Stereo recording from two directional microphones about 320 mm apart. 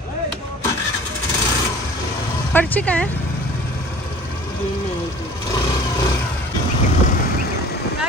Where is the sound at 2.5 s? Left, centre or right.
Centre.